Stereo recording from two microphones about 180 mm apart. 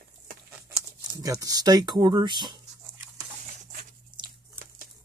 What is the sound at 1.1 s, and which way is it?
Speech, 20° right (ahead or behind).